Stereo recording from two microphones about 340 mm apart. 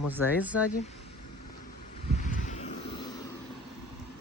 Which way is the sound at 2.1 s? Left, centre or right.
Left.